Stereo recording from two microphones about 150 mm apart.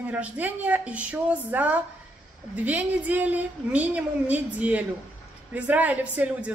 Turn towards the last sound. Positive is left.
turn(degrees=-10)  # may be behind; listen again after turning